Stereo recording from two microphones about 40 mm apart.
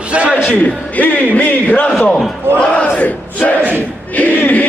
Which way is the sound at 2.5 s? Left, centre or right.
Right.